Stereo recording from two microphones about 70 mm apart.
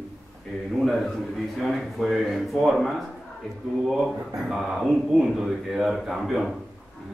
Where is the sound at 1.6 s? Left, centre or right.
Centre.